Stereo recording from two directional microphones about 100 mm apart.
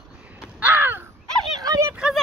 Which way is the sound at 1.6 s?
35° right (ahead or behind).